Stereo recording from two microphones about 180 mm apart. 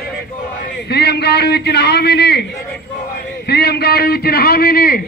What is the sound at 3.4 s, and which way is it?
A man's voice, 65° left (ahead or behind).